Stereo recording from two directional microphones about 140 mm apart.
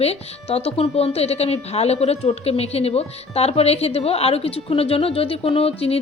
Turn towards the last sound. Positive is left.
turn(degrees=45)  # may be behind; listen again after turning